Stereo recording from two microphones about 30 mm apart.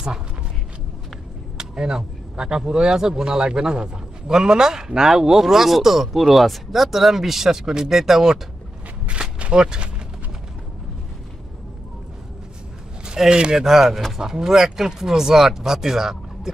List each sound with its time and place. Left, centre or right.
1.5 s a sound: right
2.3 s a man's voice: right
3.2 s speech: right
9.6 s speech: right
13.3 s speech: right
13.6 s speech: centre